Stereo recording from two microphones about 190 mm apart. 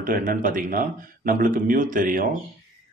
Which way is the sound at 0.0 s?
45° right (ahead or behind).